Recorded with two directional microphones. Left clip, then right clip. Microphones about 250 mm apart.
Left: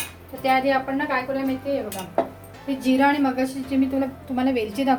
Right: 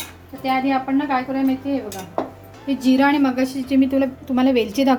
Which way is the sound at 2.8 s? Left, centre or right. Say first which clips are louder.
Right 3 dB; right.